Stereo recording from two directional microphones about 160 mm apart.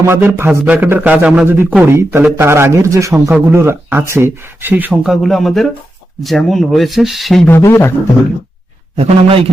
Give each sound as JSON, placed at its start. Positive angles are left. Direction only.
{"t": 0.1, "sound": "speech", "side_deg": -15}
{"t": 7.4, "sound": "speech", "side_deg": 15}
{"t": 9.0, "sound": "speech", "side_deg": -35}